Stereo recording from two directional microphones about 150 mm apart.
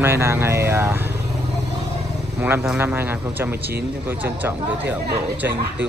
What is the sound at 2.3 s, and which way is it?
Speech, 15° right (ahead or behind).